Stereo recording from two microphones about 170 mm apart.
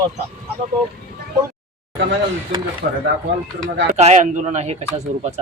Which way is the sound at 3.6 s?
40° right (ahead or behind).